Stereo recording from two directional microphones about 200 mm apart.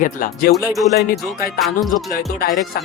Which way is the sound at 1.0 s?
50° left (ahead or behind).